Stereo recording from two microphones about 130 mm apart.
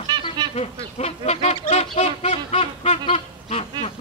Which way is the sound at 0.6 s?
55° left (ahead or behind).